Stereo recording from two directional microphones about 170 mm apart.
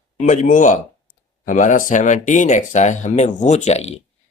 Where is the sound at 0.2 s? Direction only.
45° left (ahead or behind).